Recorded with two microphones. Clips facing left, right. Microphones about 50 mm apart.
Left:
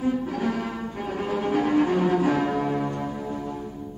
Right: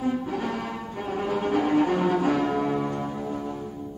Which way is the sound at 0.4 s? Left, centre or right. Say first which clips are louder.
Left 3 dB; centre.